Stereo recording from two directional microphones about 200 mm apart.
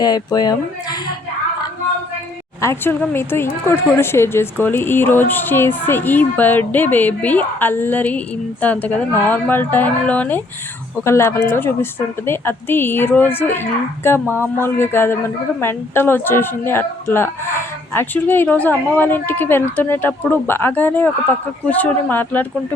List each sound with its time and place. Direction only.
0.0 s speech: 20° left (ahead or behind)
2.6 s speech: 10° left (ahead or behind)